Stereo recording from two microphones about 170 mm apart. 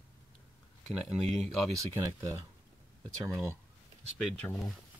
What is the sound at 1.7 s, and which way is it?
Speech, 20° right (ahead or behind).